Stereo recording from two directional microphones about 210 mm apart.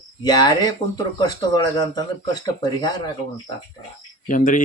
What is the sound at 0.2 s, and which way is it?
Speech, 20° left (ahead or behind).